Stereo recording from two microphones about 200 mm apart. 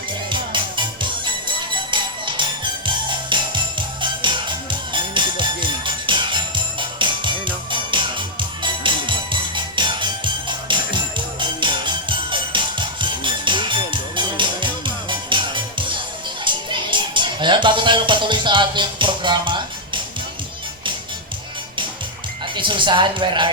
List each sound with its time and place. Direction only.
0.3 s music: 25° right (ahead or behind)
22.5 s speech: 25° right (ahead or behind)